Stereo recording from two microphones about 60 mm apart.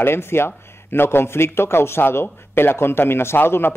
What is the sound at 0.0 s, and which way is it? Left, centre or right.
A man's voice, left.